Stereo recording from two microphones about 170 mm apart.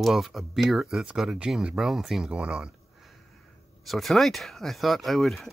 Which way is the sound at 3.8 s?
Centre (ahead or behind).